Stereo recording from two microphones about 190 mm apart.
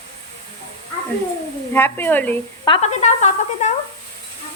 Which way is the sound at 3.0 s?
35° left (ahead or behind).